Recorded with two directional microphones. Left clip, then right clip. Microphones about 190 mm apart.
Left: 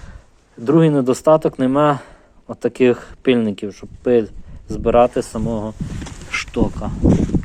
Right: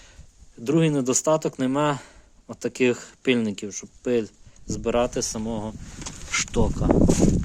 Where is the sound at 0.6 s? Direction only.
15° right (ahead or behind).